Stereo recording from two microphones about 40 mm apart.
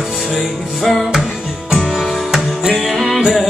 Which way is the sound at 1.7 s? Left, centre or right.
Right.